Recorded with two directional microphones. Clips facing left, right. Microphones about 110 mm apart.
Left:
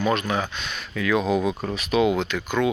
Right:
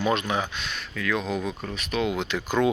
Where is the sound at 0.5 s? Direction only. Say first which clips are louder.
Left 3 dB; centre (ahead or behind).